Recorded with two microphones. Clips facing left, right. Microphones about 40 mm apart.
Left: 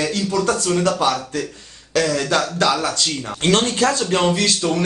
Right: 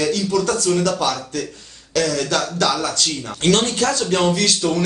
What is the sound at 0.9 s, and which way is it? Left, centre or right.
Speech, centre.